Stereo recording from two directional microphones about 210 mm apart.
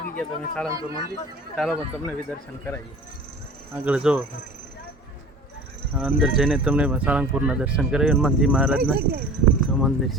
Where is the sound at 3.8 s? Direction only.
5° right (ahead or behind).